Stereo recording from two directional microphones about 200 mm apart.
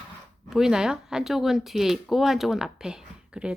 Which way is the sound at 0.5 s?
Centre (ahead or behind).